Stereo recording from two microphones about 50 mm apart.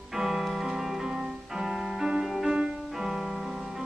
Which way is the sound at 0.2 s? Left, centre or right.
Centre.